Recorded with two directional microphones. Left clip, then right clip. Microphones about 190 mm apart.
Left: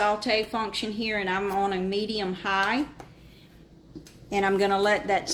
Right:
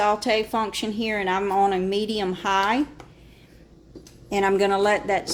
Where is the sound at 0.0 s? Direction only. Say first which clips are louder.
Right 3 dB; 30° right (ahead or behind).